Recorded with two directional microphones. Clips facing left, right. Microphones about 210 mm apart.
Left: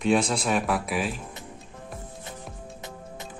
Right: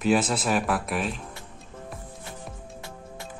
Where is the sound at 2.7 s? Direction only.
20° left (ahead or behind).